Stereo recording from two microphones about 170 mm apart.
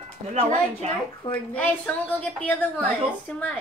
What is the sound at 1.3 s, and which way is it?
A woman's voice, 10° left (ahead or behind).